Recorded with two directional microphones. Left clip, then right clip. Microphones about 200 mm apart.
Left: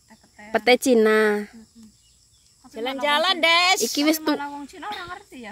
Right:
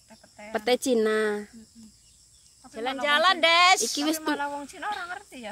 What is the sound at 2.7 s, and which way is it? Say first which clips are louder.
Speech: left 2 dB; 45° left (ahead or behind).